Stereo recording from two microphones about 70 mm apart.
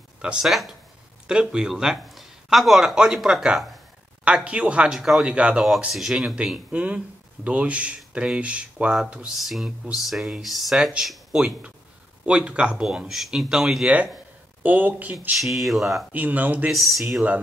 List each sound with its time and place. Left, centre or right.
0.2 s speech: centre
0.5 s speech: centre
1.2 s speech: centre
4.5 s speech: centre
5.9 s speech: centre
9.3 s speech: centre
12.3 s speech: centre
13.8 s speech: centre
15.3 s speech: centre
16.1 s speech: right
16.7 s speech: centre